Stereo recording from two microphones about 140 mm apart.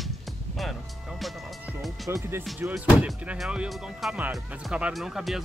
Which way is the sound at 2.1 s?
20° right (ahead or behind).